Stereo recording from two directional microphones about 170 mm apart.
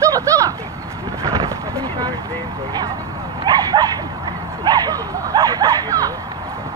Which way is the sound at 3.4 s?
25° right (ahead or behind).